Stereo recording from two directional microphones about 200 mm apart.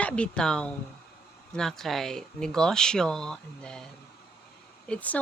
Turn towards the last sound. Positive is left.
turn(degrees=5)  # may be behind; listen again after turning